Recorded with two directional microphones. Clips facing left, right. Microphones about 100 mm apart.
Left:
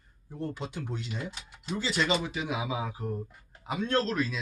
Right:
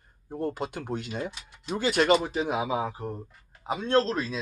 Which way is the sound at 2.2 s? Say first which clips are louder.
Right 5 dB; 40° right (ahead or behind).